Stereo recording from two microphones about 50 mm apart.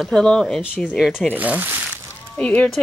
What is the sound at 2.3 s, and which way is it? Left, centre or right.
Speech, left.